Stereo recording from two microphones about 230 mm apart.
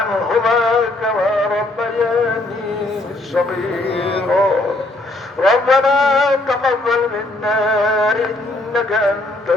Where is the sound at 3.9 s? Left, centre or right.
Left.